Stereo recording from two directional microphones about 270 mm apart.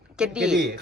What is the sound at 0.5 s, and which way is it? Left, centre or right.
Speech, right.